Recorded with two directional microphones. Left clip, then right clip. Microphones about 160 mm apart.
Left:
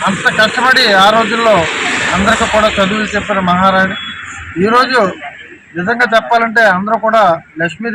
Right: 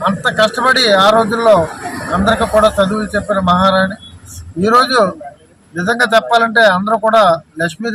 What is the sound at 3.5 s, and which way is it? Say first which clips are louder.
A man's voice: left 2 dB; 25° right (ahead or behind).